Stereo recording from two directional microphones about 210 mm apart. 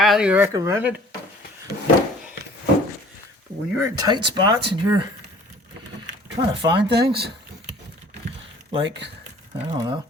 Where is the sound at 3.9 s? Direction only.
20° right (ahead or behind).